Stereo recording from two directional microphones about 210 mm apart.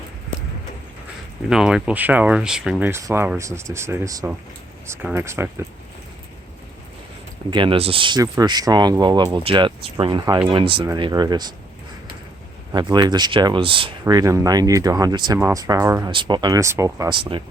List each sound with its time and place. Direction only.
1.5 s speech: 5° right (ahead or behind)
7.5 s speech: 25° right (ahead or behind)
12.7 s speech: 20° right (ahead or behind)